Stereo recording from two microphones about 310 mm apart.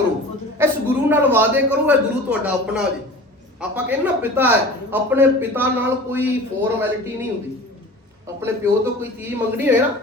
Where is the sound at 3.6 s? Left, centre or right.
Centre.